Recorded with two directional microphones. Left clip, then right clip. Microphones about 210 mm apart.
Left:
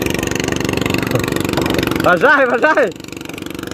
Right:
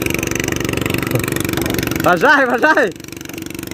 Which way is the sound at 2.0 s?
20° right (ahead or behind).